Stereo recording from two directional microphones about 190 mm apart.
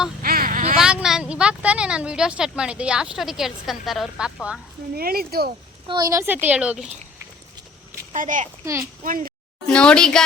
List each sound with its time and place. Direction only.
0.2 s a sound: 50° right (ahead or behind)
0.8 s a woman's voice: 5° right (ahead or behind)
4.9 s speech: 55° right (ahead or behind)
5.9 s a woman's voice: 20° right (ahead or behind)
8.1 s speech: 40° right (ahead or behind)
8.6 s a woman's voice: 15° right (ahead or behind)
9.0 s speech: 45° right (ahead or behind)
9.6 s speech: 5° left (ahead or behind)